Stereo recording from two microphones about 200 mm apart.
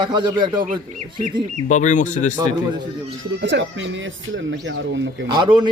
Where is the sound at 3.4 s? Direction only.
65° right (ahead or behind).